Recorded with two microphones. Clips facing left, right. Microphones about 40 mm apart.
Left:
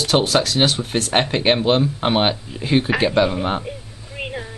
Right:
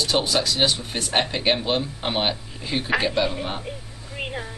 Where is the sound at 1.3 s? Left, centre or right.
Left.